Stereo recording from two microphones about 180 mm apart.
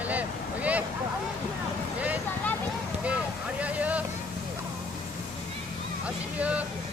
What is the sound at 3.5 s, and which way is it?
Vehicle, 10° right (ahead or behind).